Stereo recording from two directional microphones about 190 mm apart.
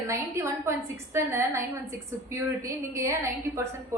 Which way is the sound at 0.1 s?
15° right (ahead or behind).